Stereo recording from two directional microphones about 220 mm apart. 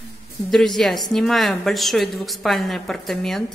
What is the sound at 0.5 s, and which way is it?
A woman's voice, centre (ahead or behind).